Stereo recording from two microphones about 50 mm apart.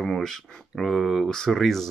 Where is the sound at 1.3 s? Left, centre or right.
Centre.